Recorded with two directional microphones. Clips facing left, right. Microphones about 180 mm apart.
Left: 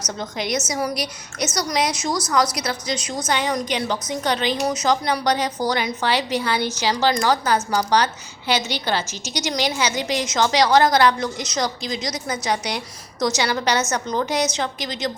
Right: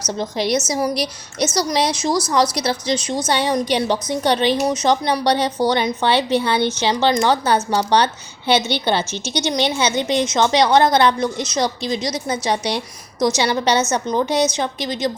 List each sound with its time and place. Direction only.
0.0 s a woman's voice: 30° right (ahead or behind)